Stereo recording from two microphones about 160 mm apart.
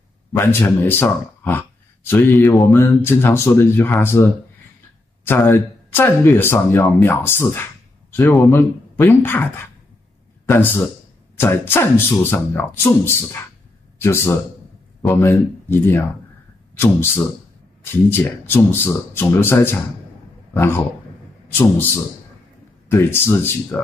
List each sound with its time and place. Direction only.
0.3 s a man's voice: 15° left (ahead or behind)
22.8 s speech: 15° left (ahead or behind)